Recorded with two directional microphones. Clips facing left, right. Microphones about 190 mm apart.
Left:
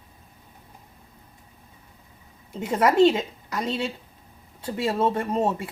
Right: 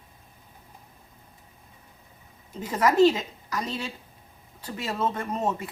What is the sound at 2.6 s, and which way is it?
Speech, 25° left (ahead or behind).